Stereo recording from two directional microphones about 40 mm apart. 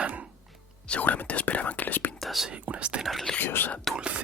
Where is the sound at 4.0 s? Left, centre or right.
Right.